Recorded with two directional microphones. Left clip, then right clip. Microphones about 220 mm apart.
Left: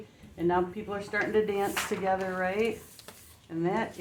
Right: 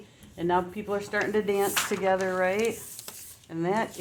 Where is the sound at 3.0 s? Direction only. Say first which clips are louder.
Right 4 dB; 50° right (ahead or behind).